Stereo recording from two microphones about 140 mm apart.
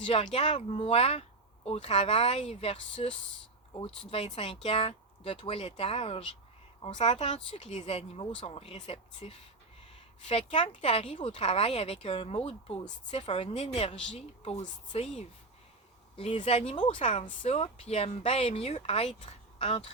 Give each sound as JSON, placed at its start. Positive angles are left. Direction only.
{"t": 0.0, "sound": "speech", "side_deg": 40}
{"t": 4.4, "sound": "speech", "side_deg": 45}
{"t": 16.1, "sound": "speech", "side_deg": 40}